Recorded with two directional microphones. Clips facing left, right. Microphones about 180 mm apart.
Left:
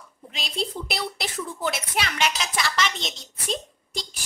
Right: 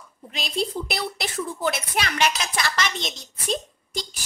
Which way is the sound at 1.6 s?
50° right (ahead or behind).